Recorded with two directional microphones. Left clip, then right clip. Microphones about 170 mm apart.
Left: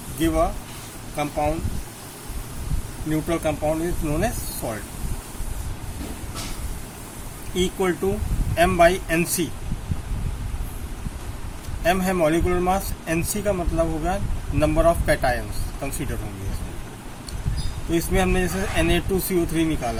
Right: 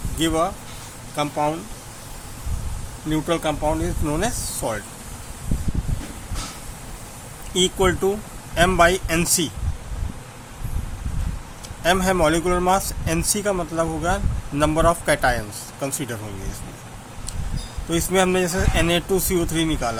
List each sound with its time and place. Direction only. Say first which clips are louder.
0.2 s speech: right 1 dB; 60° right (ahead or behind)
3.1 s speech: right 2 dB; 60° right (ahead or behind)
7.5 s speech: right 4 dB; 65° right (ahead or behind)
11.8 s speech: right 2 dB; 65° right (ahead or behind)
17.9 s speech: right 3 dB; 65° right (ahead or behind)